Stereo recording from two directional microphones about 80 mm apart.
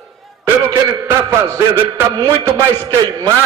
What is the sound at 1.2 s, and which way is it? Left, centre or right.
A man's voice, right.